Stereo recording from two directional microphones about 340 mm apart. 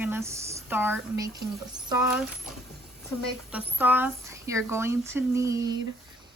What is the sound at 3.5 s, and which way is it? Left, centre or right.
A woman's voice, centre.